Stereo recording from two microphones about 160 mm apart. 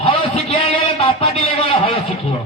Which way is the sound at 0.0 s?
35° left (ahead or behind).